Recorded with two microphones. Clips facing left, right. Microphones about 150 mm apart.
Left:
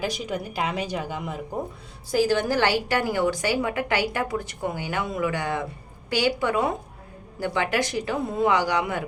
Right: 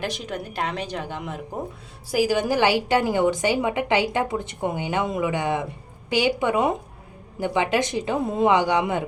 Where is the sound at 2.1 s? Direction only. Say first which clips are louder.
Right 1 dB; 10° right (ahead or behind).